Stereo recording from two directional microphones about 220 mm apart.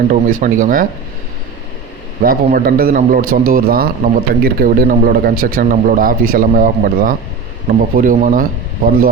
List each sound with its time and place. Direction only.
0.3 s speech: 35° right (ahead or behind)
2.2 s speech: 40° right (ahead or behind)